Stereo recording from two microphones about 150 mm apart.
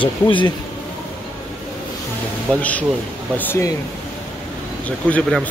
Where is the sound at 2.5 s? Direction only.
10° left (ahead or behind).